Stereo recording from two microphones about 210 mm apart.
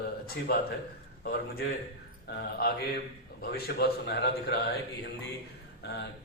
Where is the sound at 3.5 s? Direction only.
50° left (ahead or behind).